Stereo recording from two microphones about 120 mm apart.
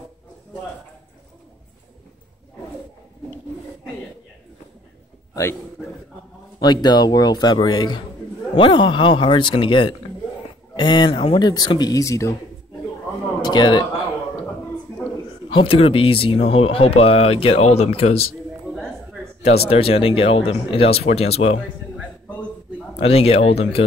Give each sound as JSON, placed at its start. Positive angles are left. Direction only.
{"t": 5.3, "sound": "a man's voice", "side_deg": 25}
{"t": 6.6, "sound": "a man's voice", "side_deg": 35}
{"t": 11.4, "sound": "a man's voice", "side_deg": 35}
{"t": 13.4, "sound": "speech", "side_deg": 40}
{"t": 15.5, "sound": "a man's voice", "side_deg": 50}
{"t": 19.4, "sound": "speech", "side_deg": 55}
{"t": 22.9, "sound": "a man's voice", "side_deg": 55}